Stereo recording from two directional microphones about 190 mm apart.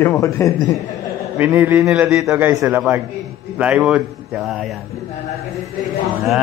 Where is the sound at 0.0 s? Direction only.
15° left (ahead or behind).